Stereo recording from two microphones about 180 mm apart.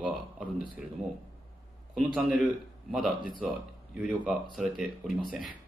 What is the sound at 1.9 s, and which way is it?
Speech, 5° right (ahead or behind).